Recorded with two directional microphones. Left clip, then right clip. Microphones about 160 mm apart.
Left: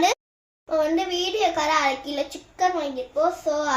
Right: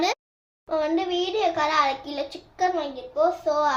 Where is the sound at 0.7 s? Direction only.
25° left (ahead or behind).